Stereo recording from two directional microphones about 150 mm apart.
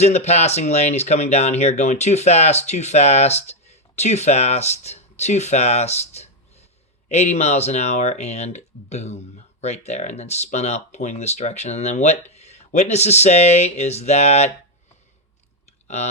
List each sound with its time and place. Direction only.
0.0 s speech: 45° left (ahead or behind)